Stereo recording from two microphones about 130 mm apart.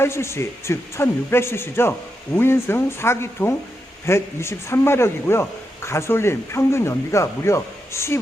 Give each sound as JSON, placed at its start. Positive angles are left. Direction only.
{"t": 0.0, "sound": "a man's voice", "side_deg": 20}